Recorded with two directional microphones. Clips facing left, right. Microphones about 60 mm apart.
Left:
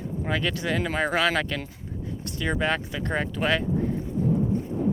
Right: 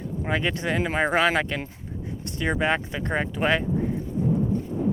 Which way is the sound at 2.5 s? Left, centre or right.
Centre.